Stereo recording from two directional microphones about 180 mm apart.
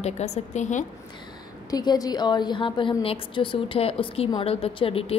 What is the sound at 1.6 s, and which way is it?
A woman's voice, 20° left (ahead or behind).